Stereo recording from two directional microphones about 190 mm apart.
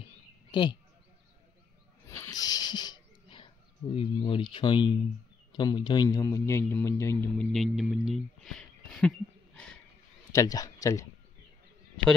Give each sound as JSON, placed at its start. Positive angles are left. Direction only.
{"t": 0.5, "sound": "speech", "side_deg": 25}
{"t": 2.0, "sound": "wheeze", "side_deg": 15}
{"t": 5.5, "sound": "speech", "side_deg": 25}
{"t": 7.5, "sound": "a sound", "side_deg": 0}
{"t": 10.3, "sound": "speech", "side_deg": 20}